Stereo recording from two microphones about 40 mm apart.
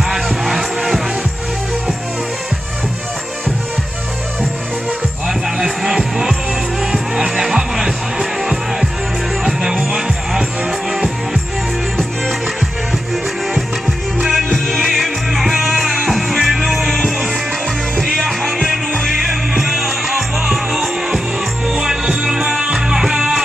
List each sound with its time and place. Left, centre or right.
0.1 s music: centre
5.6 s music: centre
14.2 s music: centre